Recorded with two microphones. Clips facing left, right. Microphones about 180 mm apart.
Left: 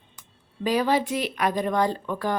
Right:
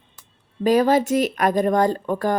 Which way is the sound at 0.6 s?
45° right (ahead or behind).